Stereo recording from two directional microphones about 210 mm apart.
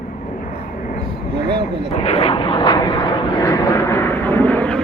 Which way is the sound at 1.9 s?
30° left (ahead or behind).